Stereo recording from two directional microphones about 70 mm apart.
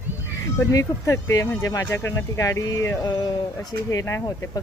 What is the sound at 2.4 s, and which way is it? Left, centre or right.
Speech, left.